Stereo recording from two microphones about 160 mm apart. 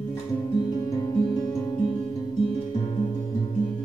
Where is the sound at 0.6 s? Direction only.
25° left (ahead or behind).